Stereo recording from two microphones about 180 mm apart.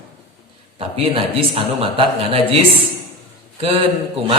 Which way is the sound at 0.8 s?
30° right (ahead or behind).